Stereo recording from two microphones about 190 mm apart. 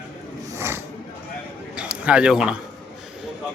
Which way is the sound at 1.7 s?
5° right (ahead or behind).